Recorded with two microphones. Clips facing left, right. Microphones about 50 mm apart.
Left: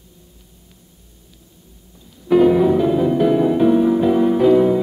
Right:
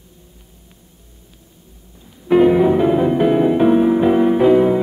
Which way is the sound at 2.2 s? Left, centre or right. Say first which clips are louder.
Right 1 dB; right.